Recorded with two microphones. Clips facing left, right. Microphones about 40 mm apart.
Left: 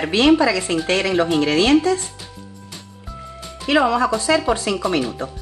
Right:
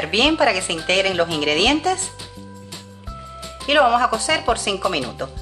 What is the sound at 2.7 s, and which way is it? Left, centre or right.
Music, centre.